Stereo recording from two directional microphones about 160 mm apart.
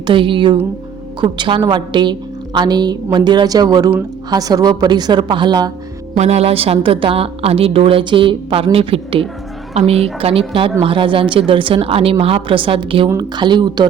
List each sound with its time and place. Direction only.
0.1 s a woman's voice: 30° right (ahead or behind)
6.1 s a woman's voice: 40° right (ahead or behind)